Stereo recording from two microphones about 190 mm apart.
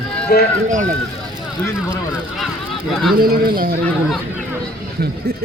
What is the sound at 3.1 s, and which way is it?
Speech, 50° right (ahead or behind).